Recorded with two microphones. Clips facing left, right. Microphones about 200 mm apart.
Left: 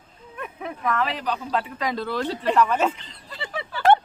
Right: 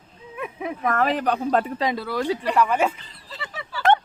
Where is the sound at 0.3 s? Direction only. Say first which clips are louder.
Right 4 dB; 10° right (ahead or behind).